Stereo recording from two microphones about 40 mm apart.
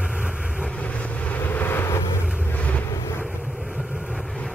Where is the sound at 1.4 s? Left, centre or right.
Left.